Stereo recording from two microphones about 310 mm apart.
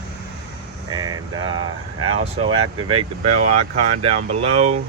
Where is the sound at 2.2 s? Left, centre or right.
Centre.